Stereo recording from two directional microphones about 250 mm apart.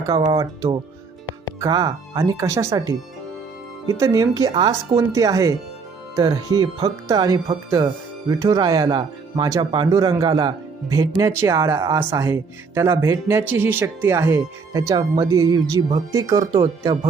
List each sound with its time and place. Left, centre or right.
0.0 s speech: centre